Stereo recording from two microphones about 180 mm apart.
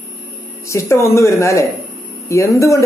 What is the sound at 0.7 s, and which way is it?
A man's voice, 15° left (ahead or behind).